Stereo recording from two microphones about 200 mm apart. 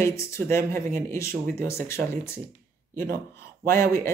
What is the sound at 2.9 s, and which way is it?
Speech, 45° right (ahead or behind).